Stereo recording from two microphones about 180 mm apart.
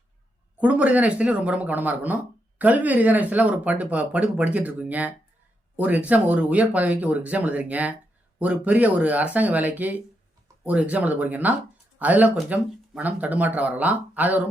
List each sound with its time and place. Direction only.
0.6 s speech: 5° right (ahead or behind)